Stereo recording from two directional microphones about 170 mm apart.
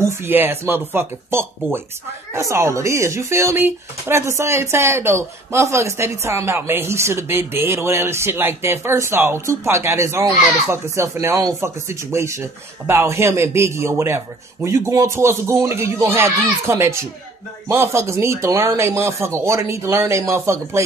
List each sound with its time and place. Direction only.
0.0 s speech: 15° right (ahead or behind)